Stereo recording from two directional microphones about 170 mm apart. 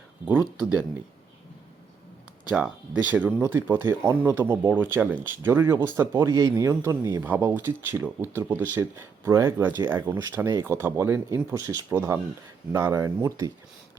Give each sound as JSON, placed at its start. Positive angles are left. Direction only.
{"t": 2.5, "sound": "speech", "side_deg": -5}